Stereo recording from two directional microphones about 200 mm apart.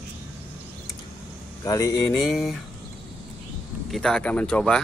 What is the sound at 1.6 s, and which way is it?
Speech, 15° left (ahead or behind).